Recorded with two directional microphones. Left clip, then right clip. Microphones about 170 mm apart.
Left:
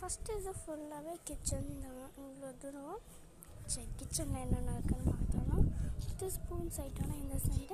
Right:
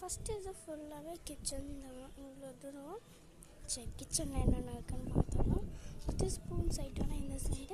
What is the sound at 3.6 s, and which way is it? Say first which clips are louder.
A woman's voice: right 1 dB; 10° right (ahead or behind).